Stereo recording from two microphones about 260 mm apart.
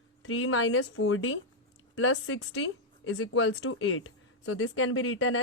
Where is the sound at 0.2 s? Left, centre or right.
Left.